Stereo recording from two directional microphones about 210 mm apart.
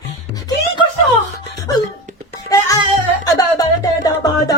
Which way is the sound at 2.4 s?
15° left (ahead or behind).